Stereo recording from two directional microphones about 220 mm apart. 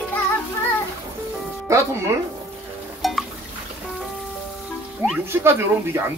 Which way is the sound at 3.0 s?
Centre (ahead or behind).